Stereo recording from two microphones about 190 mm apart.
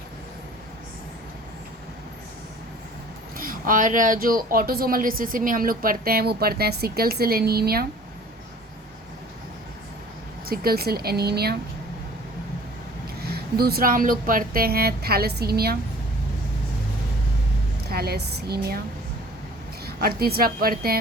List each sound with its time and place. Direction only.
3.3 s speech: 50° right (ahead or behind)
10.4 s speech: 50° right (ahead or behind)
13.3 s speech: 55° right (ahead or behind)
17.8 s a woman's voice: 55° right (ahead or behind)
19.8 s speech: 55° right (ahead or behind)